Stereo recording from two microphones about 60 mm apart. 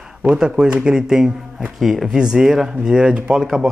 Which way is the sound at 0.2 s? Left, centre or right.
Centre.